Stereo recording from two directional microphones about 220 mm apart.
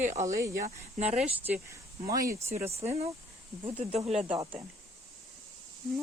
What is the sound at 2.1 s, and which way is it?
Speech, 15° right (ahead or behind).